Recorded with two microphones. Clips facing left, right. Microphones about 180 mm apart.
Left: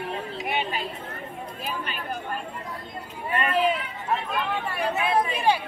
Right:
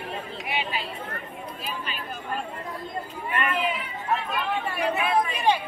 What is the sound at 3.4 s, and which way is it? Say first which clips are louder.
Speech: left 4 dB; 35° left (ahead or behind).